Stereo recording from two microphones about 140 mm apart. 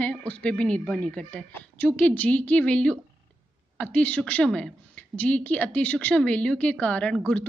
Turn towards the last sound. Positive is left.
turn(degrees=5)  # may be behind; listen again after turning